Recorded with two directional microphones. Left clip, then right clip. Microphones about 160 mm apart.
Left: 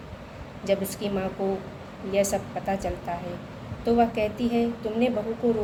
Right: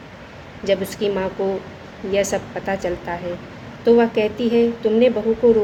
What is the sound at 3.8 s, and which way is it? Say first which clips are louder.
A woman's voice: right 8 dB; 75° right (ahead or behind).